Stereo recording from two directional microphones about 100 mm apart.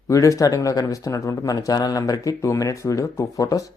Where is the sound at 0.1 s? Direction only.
30° left (ahead or behind).